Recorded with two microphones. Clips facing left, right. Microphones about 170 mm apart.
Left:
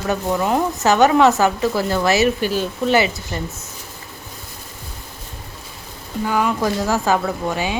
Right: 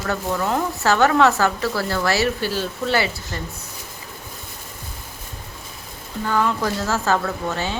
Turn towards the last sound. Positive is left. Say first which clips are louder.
# left 3 dB
turn(degrees=15)  # may be behind; listen again after turning